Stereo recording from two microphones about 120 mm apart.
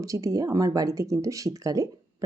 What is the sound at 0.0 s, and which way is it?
A woman's voice, 25° right (ahead or behind).